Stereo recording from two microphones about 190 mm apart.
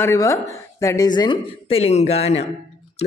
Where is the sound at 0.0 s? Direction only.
15° left (ahead or behind).